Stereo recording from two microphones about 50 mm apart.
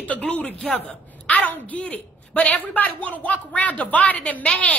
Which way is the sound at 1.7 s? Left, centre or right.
Left.